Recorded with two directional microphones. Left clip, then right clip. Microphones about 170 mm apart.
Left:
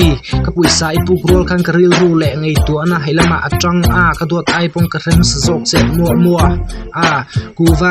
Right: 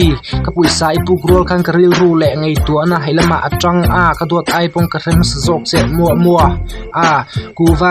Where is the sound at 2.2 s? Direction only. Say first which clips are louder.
Right 3 dB; 15° left (ahead or behind).